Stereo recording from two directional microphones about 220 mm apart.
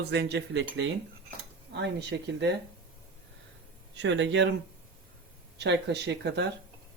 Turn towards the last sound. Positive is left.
turn(degrees=-50)  # may be behind; listen again after turning